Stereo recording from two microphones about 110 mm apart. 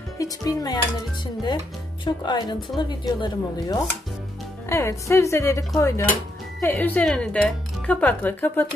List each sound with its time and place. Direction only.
0.2 s speech: 30° left (ahead or behind)
2.0 s speech: 40° left (ahead or behind)
2.7 s speech: 5° left (ahead or behind)
3.1 s speech: 40° left (ahead or behind)
4.6 s a woman's voice: 25° left (ahead or behind)